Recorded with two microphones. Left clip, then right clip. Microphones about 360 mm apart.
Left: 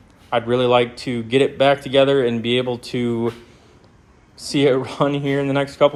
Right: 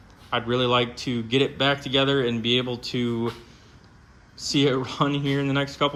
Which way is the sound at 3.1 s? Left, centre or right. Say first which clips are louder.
Left 6 dB; left.